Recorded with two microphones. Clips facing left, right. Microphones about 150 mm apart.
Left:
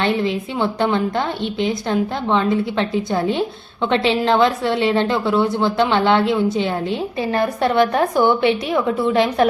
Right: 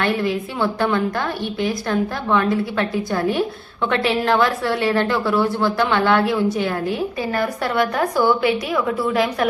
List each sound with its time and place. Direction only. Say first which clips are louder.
0.0 s a woman's voice: left 1 dB; 20° left (ahead or behind)